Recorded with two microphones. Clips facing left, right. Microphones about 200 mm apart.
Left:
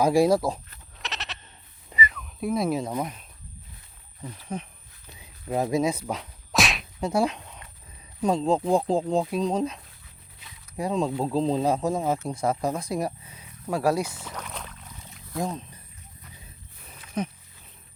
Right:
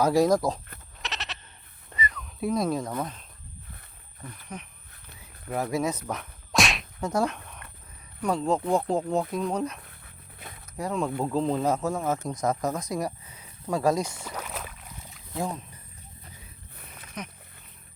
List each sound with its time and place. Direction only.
0.0 s speech: 10° left (ahead or behind)
1.0 s goat: centre (ahead or behind)
1.9 s a sound: 5° left (ahead or behind)
4.5 s speech: 25° left (ahead or behind)
5.5 s whip: 20° left (ahead or behind); by 6.8 s centre (ahead or behind)
7.0 s speech: 10° left (ahead or behind); by 9.1 s 30° left (ahead or behind)
9.3 s speech: 20° left (ahead or behind)
9.8 s a sound: 55° right (ahead or behind)
10.8 s speech: 15° left (ahead or behind)
11.6 s speech: 15° left (ahead or behind)
14.3 s boat: 5° right (ahead or behind)
16.7 s wild animals: 60° right (ahead or behind)